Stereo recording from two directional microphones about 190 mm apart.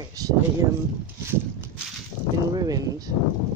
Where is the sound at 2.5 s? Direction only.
20° right (ahead or behind).